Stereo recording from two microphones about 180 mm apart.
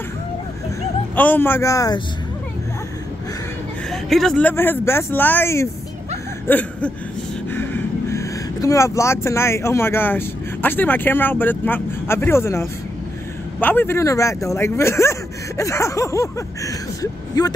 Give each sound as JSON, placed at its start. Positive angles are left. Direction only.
{"t": 1.1, "sound": "speech", "side_deg": 10}
{"t": 3.9, "sound": "speech", "side_deg": 0}
{"t": 6.4, "sound": "a sound", "side_deg": 10}
{"t": 7.5, "sound": "speech", "side_deg": 15}